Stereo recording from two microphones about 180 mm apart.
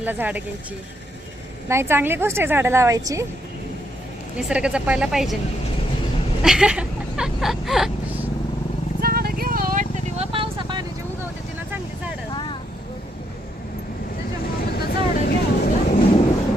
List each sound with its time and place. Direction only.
0.0 s a woman's voice: 10° right (ahead or behind)
1.6 s a woman's voice: 15° right (ahead or behind)
4.4 s speech: 5° right (ahead or behind)
6.4 s vehicle: 5° right (ahead or behind)
9.0 s a sound: 55° right (ahead or behind)
10.2 s vehicle: 30° right (ahead or behind)
12.3 s vehicle: 25° left (ahead or behind)
14.6 s vehicle: 60° left (ahead or behind)